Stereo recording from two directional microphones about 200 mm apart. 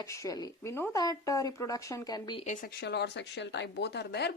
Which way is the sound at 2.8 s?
60° left (ahead or behind).